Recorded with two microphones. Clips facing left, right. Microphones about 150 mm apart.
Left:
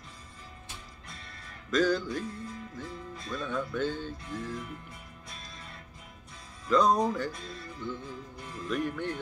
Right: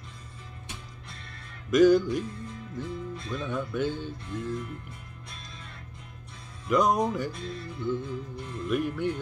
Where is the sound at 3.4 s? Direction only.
10° right (ahead or behind).